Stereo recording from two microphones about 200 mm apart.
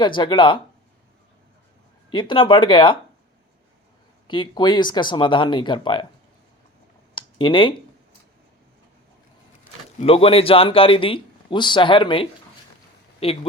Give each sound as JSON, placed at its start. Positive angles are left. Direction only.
{"t": 0.0, "sound": "a man's voice", "side_deg": 25}
{"t": 2.0, "sound": "a man's voice", "side_deg": 25}
{"t": 4.3, "sound": "a man's voice", "side_deg": 25}
{"t": 7.2, "sound": "speech", "side_deg": 25}
{"t": 10.0, "sound": "a man's voice", "side_deg": 30}